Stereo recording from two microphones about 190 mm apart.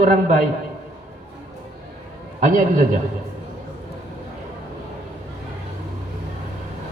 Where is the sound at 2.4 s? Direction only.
45° right (ahead or behind).